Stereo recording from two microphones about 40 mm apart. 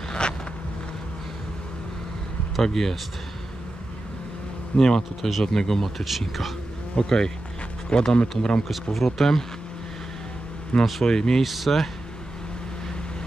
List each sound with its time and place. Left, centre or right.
0.2 s vehicle: left
2.6 s speech: centre
4.7 s speech: centre
6.0 s speech: centre
7.0 s speech: centre
8.9 s speech: centre
10.7 s speech: left
11.1 s speech: centre
11.4 s speech: centre